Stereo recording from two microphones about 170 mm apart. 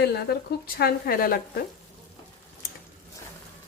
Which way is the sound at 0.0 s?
70° left (ahead or behind).